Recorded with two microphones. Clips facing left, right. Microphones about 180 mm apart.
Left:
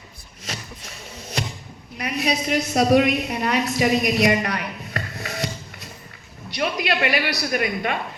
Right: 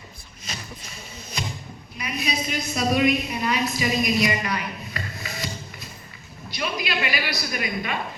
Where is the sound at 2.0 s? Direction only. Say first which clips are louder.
Left 5 dB; 75° left (ahead or behind).